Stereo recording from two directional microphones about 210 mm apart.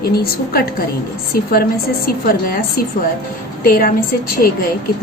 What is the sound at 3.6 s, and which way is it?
Speech, 40° left (ahead or behind).